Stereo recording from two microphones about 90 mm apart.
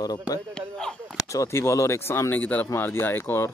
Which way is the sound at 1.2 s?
35° left (ahead or behind).